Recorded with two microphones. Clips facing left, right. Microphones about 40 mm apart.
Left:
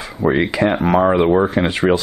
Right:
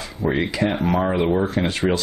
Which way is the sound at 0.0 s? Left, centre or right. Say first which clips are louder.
Left 5 dB; centre.